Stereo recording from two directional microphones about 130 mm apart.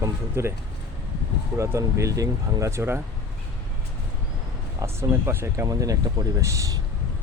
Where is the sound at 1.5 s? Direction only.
25° right (ahead or behind).